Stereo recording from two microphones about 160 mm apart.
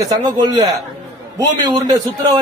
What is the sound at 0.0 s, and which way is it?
A man's voice, 25° right (ahead or behind).